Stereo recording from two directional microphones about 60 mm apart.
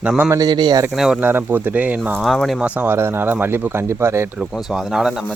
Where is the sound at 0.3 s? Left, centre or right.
Right.